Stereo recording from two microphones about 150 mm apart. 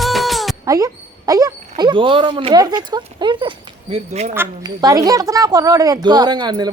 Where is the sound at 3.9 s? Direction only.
45° right (ahead or behind).